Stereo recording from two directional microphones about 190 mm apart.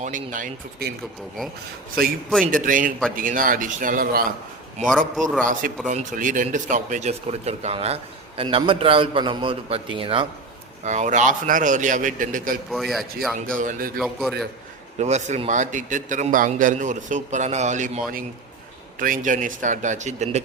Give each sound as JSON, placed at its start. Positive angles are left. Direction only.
{"t": 0.0, "sound": "a man's voice", "side_deg": -45}
{"t": 2.4, "sound": "a man's voice", "side_deg": -45}
{"t": 5.4, "sound": "a man's voice", "side_deg": -45}
{"t": 10.8, "sound": "a man's voice", "side_deg": -40}
{"t": 12.7, "sound": "a man's voice", "side_deg": 0}
{"t": 13.5, "sound": "a man's voice", "side_deg": -45}
{"t": 14.0, "sound": "a man's voice", "side_deg": 0}
{"t": 14.9, "sound": "a man's voice", "side_deg": -35}